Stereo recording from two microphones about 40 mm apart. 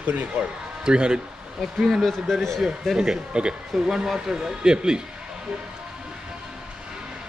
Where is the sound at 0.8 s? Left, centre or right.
Right.